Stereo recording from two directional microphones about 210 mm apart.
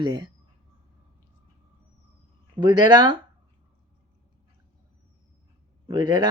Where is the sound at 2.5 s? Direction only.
20° right (ahead or behind).